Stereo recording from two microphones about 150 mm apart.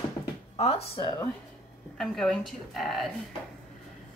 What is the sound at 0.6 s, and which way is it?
Speech, 40° left (ahead or behind).